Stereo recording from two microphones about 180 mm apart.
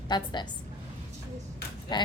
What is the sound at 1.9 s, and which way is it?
Speech, 25° left (ahead or behind).